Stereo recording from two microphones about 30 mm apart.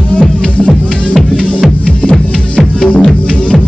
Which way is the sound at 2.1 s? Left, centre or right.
Left.